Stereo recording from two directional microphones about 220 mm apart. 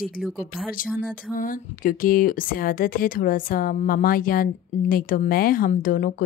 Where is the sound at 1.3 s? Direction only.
40° left (ahead or behind).